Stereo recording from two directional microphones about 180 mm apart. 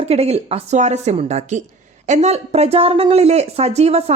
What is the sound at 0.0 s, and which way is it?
Speech, 35° right (ahead or behind).